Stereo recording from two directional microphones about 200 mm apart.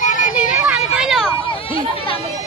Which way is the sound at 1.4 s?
25° left (ahead or behind).